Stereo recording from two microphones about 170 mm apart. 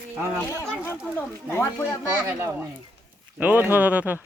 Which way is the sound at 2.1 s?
15° right (ahead or behind).